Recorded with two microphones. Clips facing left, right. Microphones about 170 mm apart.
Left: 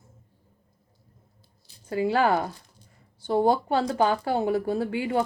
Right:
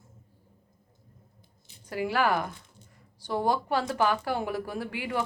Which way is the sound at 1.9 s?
25° left (ahead or behind).